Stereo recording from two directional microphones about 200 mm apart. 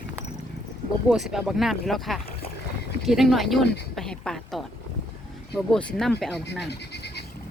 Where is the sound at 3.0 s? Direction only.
Centre (ahead or behind).